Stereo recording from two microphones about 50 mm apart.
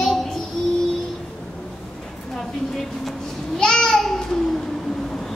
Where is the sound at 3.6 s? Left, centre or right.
Centre.